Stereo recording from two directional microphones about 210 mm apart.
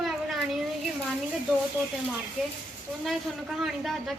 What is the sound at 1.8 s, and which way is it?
Speech, 15° right (ahead or behind).